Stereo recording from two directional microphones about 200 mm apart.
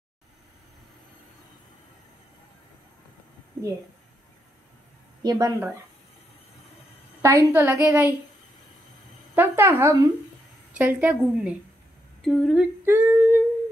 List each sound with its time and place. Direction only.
5.2 s speech: 20° right (ahead or behind)
7.2 s a woman's voice: 15° right (ahead or behind)
9.3 s a woman's voice: 10° right (ahead or behind)
12.8 s humming: 10° right (ahead or behind)